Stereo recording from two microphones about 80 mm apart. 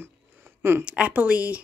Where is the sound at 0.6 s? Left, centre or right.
Right.